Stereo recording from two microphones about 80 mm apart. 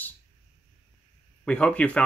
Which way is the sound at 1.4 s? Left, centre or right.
Centre.